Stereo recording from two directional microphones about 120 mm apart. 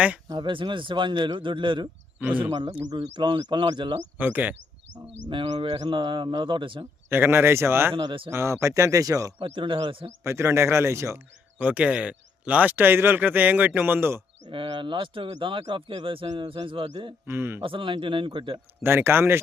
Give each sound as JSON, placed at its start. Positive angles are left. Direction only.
{"t": 0.3, "sound": "speech", "side_deg": -40}
{"t": 2.1, "sound": "speech", "side_deg": -15}
{"t": 2.5, "sound": "speech", "side_deg": -30}
{"t": 4.2, "sound": "speech", "side_deg": -15}
{"t": 5.3, "sound": "speech", "side_deg": -45}
{"t": 7.1, "sound": "speech", "side_deg": -20}
{"t": 7.9, "sound": "speech", "side_deg": -45}
{"t": 8.3, "sound": "speech", "side_deg": -20}
{"t": 9.4, "sound": "speech", "side_deg": -45}
{"t": 10.2, "sound": "speech", "side_deg": -20}
{"t": 14.4, "sound": "speech", "side_deg": -40}
{"t": 17.2, "sound": "speech", "side_deg": -20}
{"t": 17.6, "sound": "speech", "side_deg": -45}
{"t": 18.8, "sound": "speech", "side_deg": -20}